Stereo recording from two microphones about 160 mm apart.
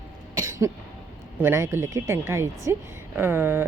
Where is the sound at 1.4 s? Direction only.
15° right (ahead or behind).